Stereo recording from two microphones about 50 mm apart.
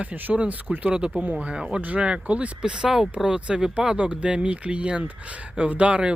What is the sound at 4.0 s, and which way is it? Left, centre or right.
Speech, right.